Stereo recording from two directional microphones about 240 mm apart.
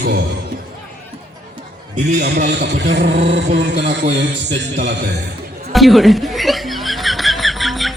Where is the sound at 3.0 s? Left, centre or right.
Right.